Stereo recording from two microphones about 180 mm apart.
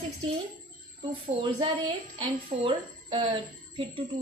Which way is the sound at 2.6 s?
30° right (ahead or behind).